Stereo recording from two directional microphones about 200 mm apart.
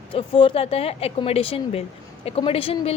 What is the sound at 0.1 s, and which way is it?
A woman's voice, 25° left (ahead or behind).